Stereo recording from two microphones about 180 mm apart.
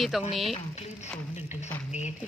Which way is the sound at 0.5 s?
40° left (ahead or behind).